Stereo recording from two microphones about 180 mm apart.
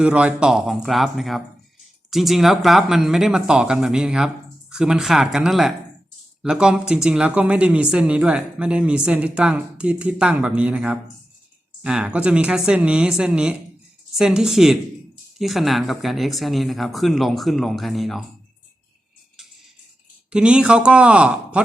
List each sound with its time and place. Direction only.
0.0 s speech: 5° right (ahead or behind)
20.3 s speech: 5° right (ahead or behind)